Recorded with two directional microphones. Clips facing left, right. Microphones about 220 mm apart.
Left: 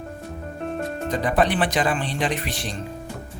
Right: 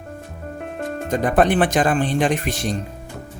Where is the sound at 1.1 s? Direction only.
50° right (ahead or behind).